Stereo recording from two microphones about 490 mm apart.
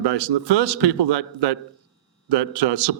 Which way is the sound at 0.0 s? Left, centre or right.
Right.